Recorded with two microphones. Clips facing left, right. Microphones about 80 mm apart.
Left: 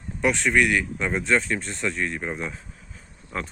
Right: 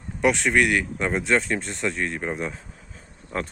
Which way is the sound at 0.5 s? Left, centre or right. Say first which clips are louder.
Even; right.